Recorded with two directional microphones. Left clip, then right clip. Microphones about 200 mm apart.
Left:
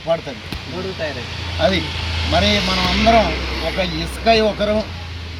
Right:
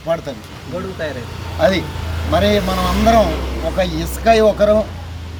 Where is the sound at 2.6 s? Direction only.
45° right (ahead or behind).